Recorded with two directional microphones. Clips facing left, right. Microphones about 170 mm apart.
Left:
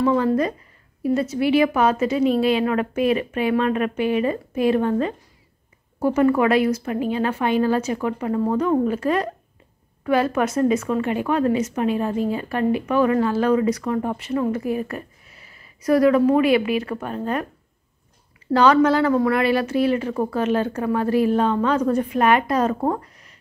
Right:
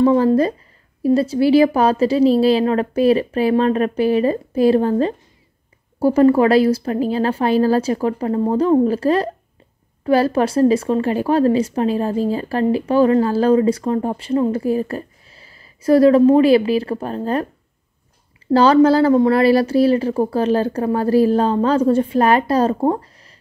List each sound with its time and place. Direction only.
0.0 s speech: 30° right (ahead or behind)
18.5 s speech: 30° right (ahead or behind)